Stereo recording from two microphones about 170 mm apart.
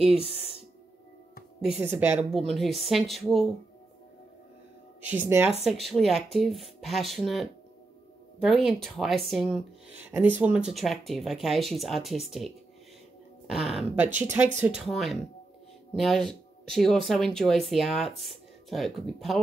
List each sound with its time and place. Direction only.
0.2 s speech: 35° left (ahead or behind)
1.6 s speech: 5° right (ahead or behind)
5.0 s speech: 10° right (ahead or behind)
9.9 s speech: 10° right (ahead or behind)
14.0 s speech: 15° right (ahead or behind)
16.3 s speech: 5° left (ahead or behind)